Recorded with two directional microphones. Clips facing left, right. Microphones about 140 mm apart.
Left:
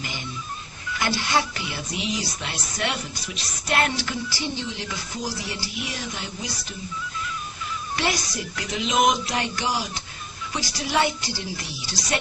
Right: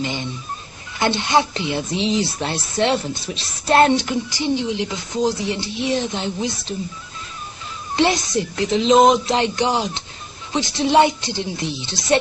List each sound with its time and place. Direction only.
0.0 s a sound: 25° right (ahead or behind)
0.9 s speech: 25° right (ahead or behind)
7.9 s speech: 25° right (ahead or behind)